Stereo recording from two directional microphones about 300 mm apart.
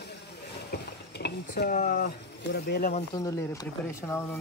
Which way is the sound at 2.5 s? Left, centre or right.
Left.